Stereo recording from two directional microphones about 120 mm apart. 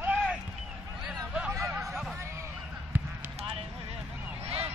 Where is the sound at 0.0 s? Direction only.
10° right (ahead or behind).